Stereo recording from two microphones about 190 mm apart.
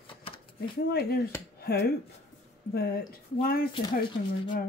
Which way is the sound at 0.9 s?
55° left (ahead or behind).